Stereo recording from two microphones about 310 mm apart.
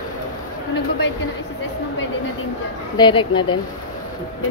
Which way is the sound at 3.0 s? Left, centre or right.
Centre.